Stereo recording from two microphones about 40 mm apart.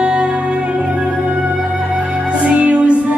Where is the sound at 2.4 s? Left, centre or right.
Right.